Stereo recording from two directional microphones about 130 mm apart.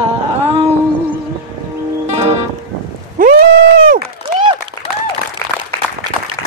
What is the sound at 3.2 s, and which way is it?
Horse, 90° right.